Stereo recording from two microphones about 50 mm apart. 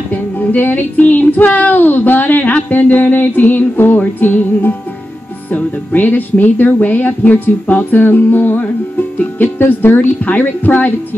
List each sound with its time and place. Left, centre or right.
0.1 s music: left